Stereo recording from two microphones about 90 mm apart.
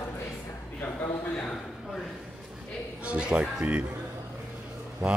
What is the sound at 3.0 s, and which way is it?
Speech, 10° right (ahead or behind).